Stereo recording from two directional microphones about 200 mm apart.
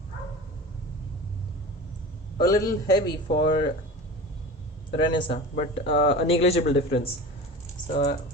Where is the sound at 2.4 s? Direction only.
15° left (ahead or behind).